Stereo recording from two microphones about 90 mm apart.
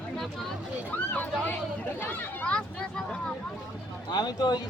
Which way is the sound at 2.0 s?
20° left (ahead or behind).